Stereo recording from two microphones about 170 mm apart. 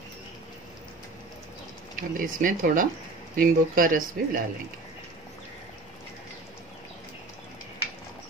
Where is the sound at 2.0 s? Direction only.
55° right (ahead or behind).